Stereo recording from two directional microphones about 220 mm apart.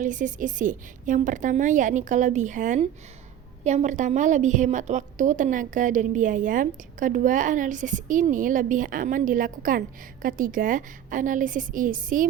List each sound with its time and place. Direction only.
0.0 s a woman's voice: 35° right (ahead or behind)